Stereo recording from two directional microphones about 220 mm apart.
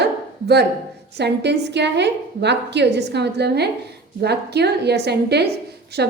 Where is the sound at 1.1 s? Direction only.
50° right (ahead or behind).